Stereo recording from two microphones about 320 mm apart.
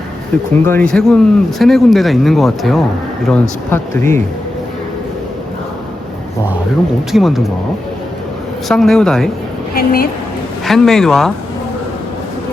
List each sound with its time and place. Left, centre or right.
0.6 s speech: centre
7.1 s speech: centre
8.6 s speech: centre
9.7 s a woman's voice: left
10.7 s speech: centre